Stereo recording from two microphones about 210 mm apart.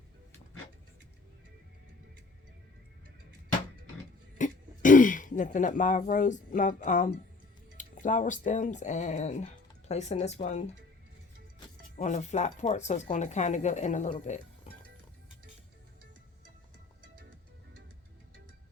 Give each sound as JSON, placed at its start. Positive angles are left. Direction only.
{"t": 4.4, "sound": "throat clearing", "side_deg": 40}
{"t": 6.1, "sound": "speech", "side_deg": 35}
{"t": 11.9, "sound": "speech", "side_deg": 35}